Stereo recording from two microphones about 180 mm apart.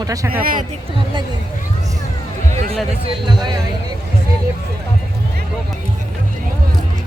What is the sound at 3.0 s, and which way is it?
Speech, 25° right (ahead or behind).